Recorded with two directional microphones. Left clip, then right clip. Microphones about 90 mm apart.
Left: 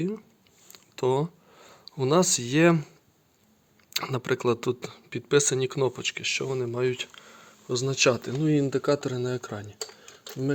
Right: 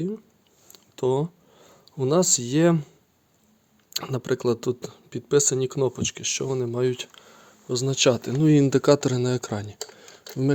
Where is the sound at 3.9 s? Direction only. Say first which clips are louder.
Right 1 dB; 45° right (ahead or behind).